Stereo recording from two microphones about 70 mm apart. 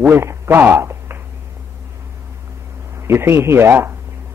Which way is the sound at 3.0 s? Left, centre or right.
Right.